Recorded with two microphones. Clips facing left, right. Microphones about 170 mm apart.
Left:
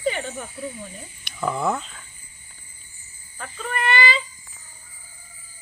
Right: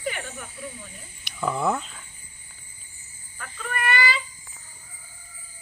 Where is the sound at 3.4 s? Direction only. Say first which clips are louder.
Left 3 dB; 25° left (ahead or behind).